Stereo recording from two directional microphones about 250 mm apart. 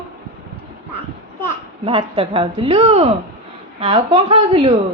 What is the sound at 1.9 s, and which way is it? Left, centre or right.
Speech, right.